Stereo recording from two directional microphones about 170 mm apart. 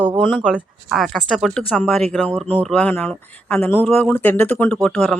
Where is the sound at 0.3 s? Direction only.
Centre (ahead or behind).